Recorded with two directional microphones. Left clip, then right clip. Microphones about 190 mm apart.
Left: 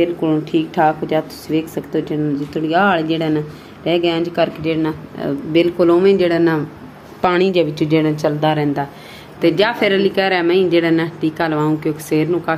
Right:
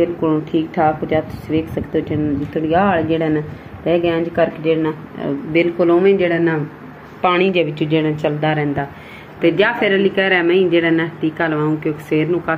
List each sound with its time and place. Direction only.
0.0 s speech: 5° left (ahead or behind)
7.2 s a woman's voice: 35° left (ahead or behind)
7.5 s a woman's voice: 10° left (ahead or behind)